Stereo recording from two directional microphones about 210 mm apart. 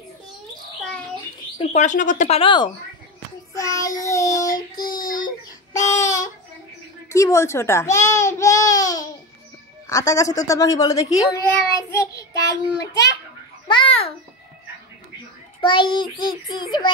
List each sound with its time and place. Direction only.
1.6 s speech: 35° left (ahead or behind)
5.1 s a sound: 15° left (ahead or behind)
7.1 s speech: 15° left (ahead or behind)
13.7 s babbling: 25° left (ahead or behind)
15.6 s a child's voice: 20° left (ahead or behind)